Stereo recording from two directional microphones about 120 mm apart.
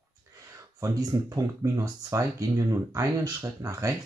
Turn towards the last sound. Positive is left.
turn(degrees=-25)  # may be behind; listen again after turning